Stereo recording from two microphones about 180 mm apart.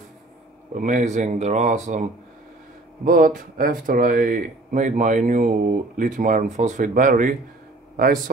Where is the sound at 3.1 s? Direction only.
50° right (ahead or behind).